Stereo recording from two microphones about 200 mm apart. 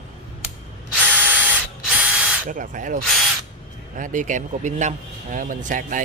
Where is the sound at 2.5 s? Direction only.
40° right (ahead or behind).